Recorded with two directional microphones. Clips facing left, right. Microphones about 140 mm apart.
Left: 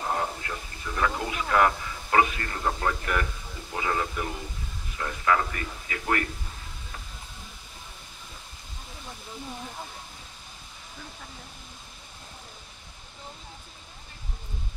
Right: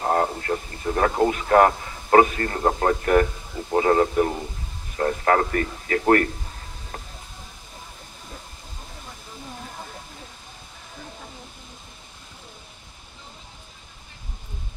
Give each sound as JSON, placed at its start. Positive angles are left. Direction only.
{"t": 0.0, "sound": "a man's voice", "side_deg": -50}